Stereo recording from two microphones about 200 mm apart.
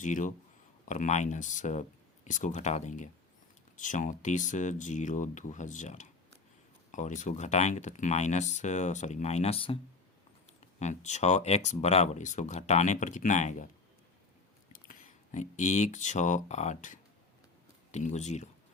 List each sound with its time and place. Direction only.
0.0 s speech: 40° left (ahead or behind)
10.8 s speech: 35° left (ahead or behind)
14.7 s speech: 40° left (ahead or behind)